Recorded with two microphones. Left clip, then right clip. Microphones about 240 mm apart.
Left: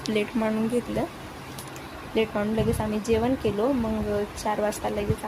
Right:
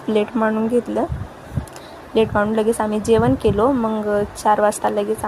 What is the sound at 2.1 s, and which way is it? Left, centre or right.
A woman's voice, right.